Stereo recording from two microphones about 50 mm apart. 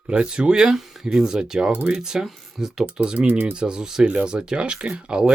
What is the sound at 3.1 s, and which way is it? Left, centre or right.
Speech, right.